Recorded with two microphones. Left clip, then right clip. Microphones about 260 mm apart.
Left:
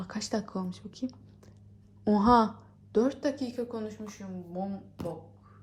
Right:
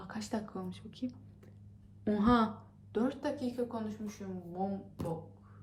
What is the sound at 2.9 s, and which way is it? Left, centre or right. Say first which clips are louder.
Speech: left 7 dB; left.